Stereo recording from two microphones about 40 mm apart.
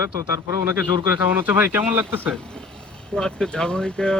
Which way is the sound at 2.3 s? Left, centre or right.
Centre.